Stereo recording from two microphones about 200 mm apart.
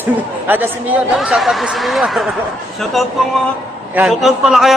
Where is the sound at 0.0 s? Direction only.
10° right (ahead or behind).